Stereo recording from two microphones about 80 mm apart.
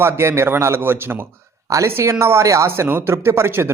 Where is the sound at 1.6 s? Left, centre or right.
Right.